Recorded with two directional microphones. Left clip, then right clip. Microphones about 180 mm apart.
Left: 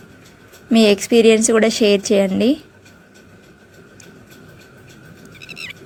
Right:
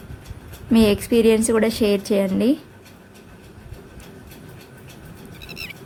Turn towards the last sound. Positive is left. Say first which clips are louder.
# left 3 dB
turn(degrees=-20)  # may be behind; listen again after turning